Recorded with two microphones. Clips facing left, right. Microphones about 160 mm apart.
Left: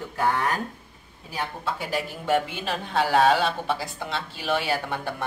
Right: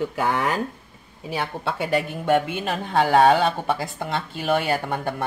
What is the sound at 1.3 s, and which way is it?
A woman's voice, 70° right (ahead or behind).